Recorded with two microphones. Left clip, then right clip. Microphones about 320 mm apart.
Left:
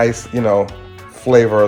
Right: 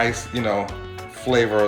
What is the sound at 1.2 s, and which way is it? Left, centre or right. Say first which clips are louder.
Speech: left 8 dB; centre.